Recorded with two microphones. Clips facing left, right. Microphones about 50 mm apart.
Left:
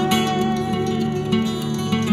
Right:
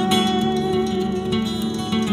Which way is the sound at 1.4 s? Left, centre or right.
Left.